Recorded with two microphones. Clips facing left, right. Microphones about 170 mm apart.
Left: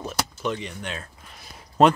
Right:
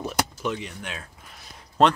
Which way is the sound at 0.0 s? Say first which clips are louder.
Right 1 dB; 10° right (ahead or behind).